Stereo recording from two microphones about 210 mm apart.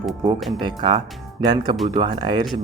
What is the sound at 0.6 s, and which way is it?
Speech, 20° right (ahead or behind).